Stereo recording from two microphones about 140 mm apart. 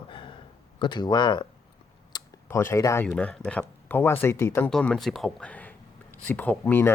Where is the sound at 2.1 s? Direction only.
30° left (ahead or behind).